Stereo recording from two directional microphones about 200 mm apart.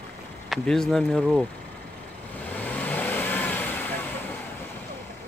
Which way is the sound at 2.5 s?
10° left (ahead or behind).